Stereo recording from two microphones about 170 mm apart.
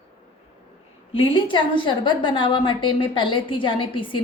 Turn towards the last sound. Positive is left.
turn(degrees=30)  # may be behind; listen again after turning